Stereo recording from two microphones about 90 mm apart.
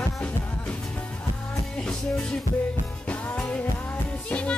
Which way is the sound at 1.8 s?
10° left (ahead or behind).